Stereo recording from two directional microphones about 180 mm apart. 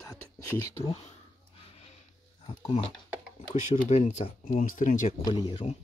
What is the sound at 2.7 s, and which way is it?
Speech, 30° left (ahead or behind).